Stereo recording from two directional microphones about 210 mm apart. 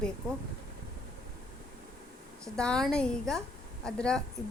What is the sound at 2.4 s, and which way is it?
A woman's voice, 5° left (ahead or behind).